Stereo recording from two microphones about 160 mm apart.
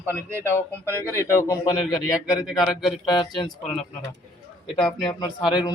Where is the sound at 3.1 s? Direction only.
30° left (ahead or behind).